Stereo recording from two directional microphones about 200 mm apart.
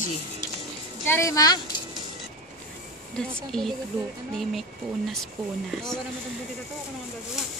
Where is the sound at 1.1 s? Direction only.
15° left (ahead or behind).